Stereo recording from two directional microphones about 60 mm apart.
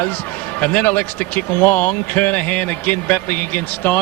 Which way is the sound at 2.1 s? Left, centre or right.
Left.